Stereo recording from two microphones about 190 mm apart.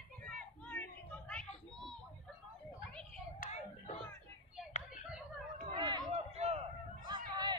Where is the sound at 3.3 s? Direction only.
40° left (ahead or behind).